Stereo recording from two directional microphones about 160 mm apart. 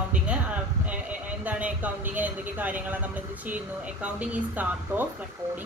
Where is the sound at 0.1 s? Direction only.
10° right (ahead or behind).